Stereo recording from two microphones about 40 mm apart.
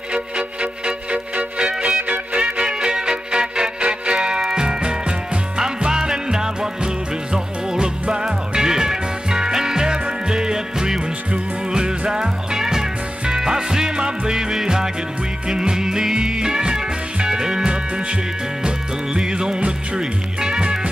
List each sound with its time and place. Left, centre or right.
0.1 s music: right
2.0 s music: right
2.5 s music: right
19.1 s music: centre